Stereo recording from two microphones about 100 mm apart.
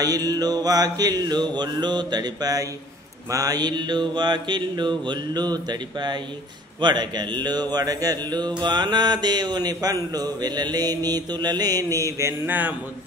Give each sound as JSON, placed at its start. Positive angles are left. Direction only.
{"t": 0.0, "sound": "mantra", "side_deg": -40}